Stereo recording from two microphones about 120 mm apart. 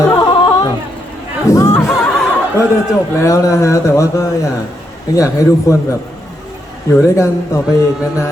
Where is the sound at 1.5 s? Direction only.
25° left (ahead or behind).